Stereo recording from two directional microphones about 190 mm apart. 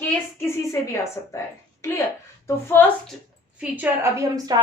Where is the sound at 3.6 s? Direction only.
10° right (ahead or behind).